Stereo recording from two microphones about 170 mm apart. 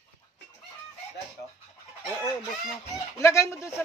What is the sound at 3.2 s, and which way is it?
Speech, 15° left (ahead or behind).